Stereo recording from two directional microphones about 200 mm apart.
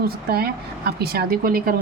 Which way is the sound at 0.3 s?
50° right (ahead or behind).